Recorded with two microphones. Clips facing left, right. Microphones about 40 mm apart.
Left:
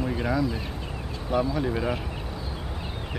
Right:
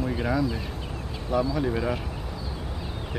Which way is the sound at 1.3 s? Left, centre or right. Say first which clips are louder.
Even; centre.